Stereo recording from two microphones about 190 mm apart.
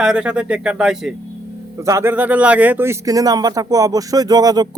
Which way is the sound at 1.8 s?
15° right (ahead or behind).